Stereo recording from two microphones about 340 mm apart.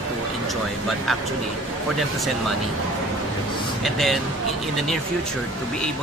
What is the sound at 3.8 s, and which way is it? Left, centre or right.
Speech, centre.